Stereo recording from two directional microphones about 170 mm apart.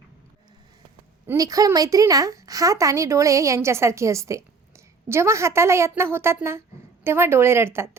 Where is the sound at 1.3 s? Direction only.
20° right (ahead or behind).